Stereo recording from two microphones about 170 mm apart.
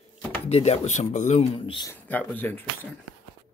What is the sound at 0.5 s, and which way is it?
Speech, 40° left (ahead or behind).